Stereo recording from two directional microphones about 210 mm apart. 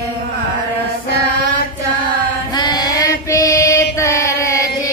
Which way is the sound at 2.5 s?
20° left (ahead or behind).